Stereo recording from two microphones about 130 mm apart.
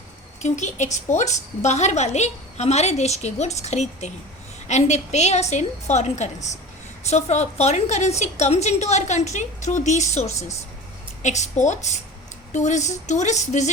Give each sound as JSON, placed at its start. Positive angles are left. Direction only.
{"t": 0.4, "sound": "a woman's voice", "side_deg": 65}